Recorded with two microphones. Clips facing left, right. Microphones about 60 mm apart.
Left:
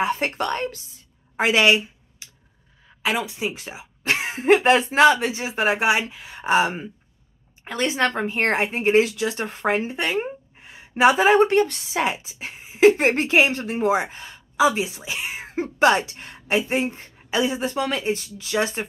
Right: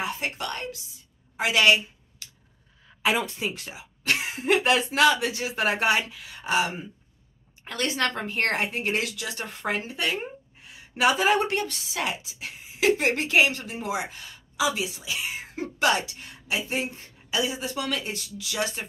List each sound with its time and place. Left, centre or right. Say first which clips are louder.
0.0 s speech: left 7 dB; left
1.3 s a sound: left 5 dB; left
1.6 s a sound: even; left
3.0 s speech: left 1 dB; centre
3.5 s speech: left 4 dB; left
7.6 s speech: left 5 dB; left